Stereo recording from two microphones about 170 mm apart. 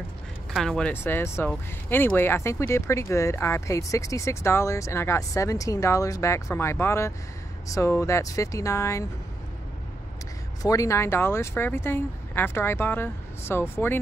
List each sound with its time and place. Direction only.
0.5 s speech: centre (ahead or behind); by 9.0 s 15° left (ahead or behind)
10.6 s speech: 20° left (ahead or behind)